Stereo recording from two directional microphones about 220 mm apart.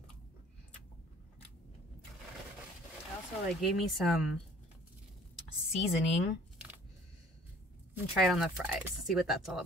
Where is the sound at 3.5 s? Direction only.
Centre (ahead or behind).